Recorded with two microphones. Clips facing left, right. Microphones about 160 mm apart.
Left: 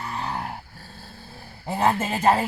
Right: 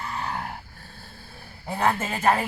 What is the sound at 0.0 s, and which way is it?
Dog, 30° left (ahead or behind).